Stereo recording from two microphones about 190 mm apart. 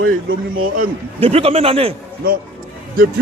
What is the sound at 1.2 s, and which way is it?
Speech, 30° right (ahead or behind).